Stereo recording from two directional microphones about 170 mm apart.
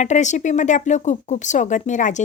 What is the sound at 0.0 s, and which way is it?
Speech, 45° left (ahead or behind).